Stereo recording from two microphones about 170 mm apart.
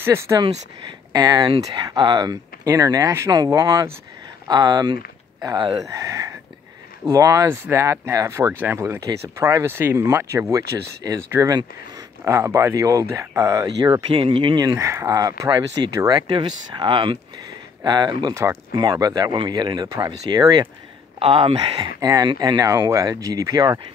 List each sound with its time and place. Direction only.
0.0 s speech: 15° right (ahead or behind)